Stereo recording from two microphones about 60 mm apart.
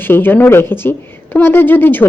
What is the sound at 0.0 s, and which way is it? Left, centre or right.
Speech, left.